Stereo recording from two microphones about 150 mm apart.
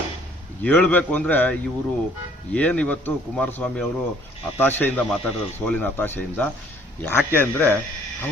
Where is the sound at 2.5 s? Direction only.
5° left (ahead or behind).